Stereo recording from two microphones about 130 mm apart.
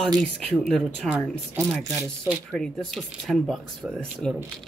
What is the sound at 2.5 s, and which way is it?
Speech, 5° left (ahead or behind).